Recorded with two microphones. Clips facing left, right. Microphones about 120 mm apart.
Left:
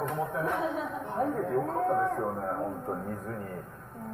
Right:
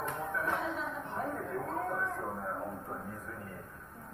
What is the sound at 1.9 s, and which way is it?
Speech, 60° left (ahead or behind).